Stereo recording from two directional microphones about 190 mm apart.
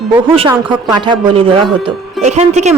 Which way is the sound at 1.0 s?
25° right (ahead or behind).